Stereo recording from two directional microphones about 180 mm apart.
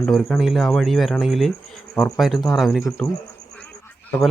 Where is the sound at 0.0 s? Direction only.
5° left (ahead or behind).